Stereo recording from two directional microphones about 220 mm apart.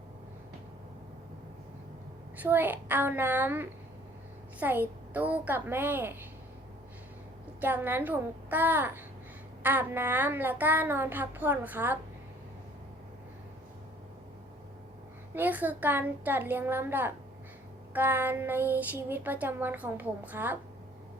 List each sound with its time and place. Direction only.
2.4 s speech: 10° right (ahead or behind)
7.6 s speech: 10° right (ahead or behind)
15.4 s speech: 5° right (ahead or behind)